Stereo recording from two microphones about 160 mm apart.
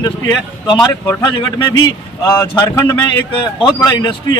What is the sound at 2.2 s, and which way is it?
A man's voice, 15° left (ahead or behind).